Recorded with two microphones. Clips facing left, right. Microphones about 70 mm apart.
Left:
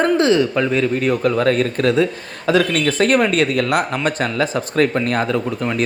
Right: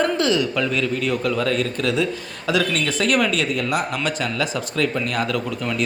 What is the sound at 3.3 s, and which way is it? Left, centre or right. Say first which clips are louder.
Speech: left 5 dB; left.